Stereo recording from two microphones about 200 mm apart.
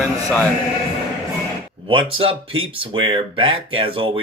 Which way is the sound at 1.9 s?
25° right (ahead or behind).